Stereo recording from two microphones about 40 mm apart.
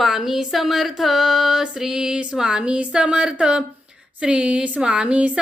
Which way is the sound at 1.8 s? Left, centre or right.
Centre.